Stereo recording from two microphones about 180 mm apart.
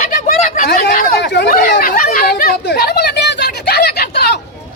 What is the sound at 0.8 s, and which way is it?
Chatter, 50° left (ahead or behind).